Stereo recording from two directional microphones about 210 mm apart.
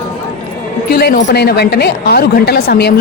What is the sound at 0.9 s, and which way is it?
A woman's voice, 50° left (ahead or behind).